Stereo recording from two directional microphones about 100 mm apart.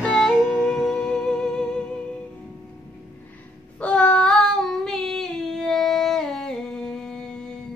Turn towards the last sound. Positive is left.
turn(degrees=5)  # may be behind; listen again after turning